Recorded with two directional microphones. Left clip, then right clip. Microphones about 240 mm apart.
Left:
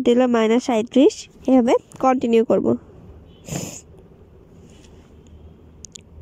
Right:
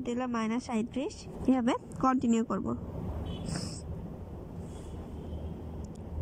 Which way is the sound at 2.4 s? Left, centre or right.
Left.